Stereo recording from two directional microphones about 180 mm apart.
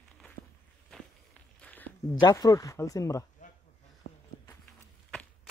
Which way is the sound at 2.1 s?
20° left (ahead or behind).